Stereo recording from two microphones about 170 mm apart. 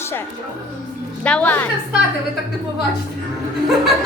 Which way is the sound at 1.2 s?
10° left (ahead or behind).